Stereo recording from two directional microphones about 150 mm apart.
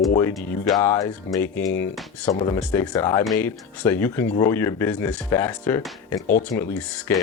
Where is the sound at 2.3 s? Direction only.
35° left (ahead or behind).